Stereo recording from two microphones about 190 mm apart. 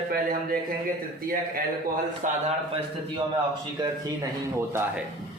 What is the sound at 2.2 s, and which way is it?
Speech, 40° right (ahead or behind).